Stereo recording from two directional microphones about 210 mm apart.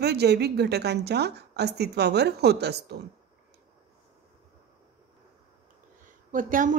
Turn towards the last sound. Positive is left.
turn(degrees=-40)  # may be behind; listen again after turning